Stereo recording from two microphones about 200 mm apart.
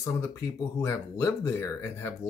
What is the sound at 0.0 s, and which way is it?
Speech, 15° left (ahead or behind).